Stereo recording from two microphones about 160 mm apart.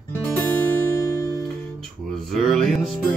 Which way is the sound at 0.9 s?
20° left (ahead or behind).